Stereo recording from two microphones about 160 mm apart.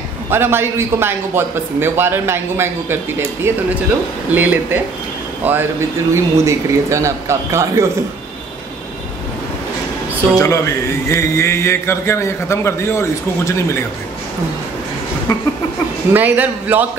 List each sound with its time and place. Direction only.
0.3 s a man's voice: 15° right (ahead or behind)
10.3 s a man's voice: 20° left (ahead or behind)
16.1 s a man's voice: 10° right (ahead or behind)